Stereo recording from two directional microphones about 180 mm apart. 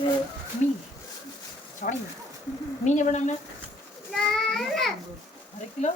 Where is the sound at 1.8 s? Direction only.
45° left (ahead or behind).